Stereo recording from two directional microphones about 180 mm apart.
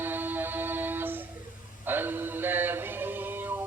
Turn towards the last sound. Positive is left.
turn(degrees=-10)  # may be behind; listen again after turning